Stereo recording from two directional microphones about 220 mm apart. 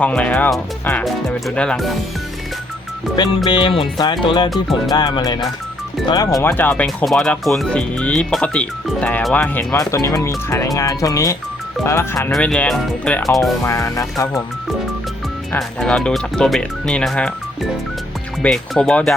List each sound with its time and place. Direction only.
0.0 s speech: 5° left (ahead or behind)
3.2 s speech: 20° left (ahead or behind); by 13.6 s centre (ahead or behind)
13.7 s speech: 15° left (ahead or behind)
15.5 s speech: 5° left (ahead or behind)
18.4 s speech: 5° left (ahead or behind)